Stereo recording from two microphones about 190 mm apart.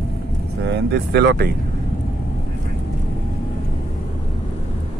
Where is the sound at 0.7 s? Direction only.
60° right (ahead or behind).